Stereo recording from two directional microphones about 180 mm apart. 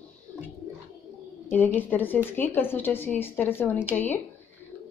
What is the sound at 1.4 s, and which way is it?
Speech, 10° left (ahead or behind).